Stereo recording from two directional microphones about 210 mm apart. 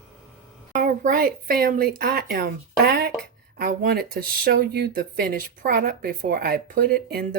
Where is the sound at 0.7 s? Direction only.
40° right (ahead or behind).